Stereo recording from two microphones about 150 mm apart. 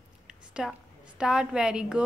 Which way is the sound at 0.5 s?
5° right (ahead or behind).